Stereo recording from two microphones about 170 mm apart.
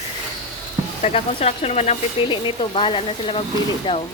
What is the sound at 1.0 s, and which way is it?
Speech, 35° left (ahead or behind).